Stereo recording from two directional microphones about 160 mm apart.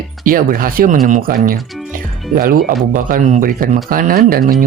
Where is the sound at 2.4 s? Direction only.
65° right (ahead or behind).